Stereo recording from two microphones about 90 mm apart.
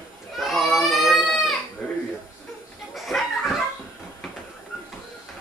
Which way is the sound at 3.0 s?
Centre (ahead or behind).